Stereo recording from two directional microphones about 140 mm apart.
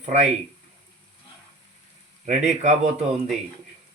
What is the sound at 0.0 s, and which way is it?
Speech, 55° right (ahead or behind).